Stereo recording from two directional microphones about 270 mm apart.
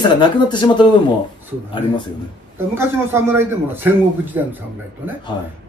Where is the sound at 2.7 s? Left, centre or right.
Centre.